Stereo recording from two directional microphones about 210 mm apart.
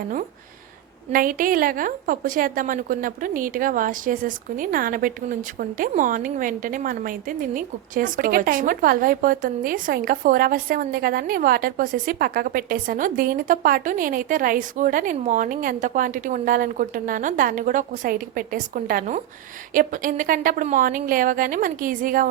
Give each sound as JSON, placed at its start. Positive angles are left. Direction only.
{"t": 1.1, "sound": "a woman's voice", "side_deg": -40}